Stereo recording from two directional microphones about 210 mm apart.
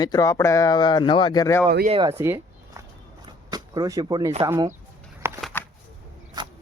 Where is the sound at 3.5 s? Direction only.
20° right (ahead or behind).